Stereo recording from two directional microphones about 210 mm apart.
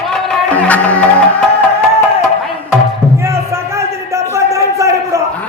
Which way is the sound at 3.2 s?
15° right (ahead or behind).